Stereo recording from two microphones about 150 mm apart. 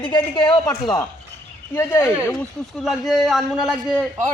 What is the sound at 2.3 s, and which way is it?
A man's voice, centre (ahead or behind).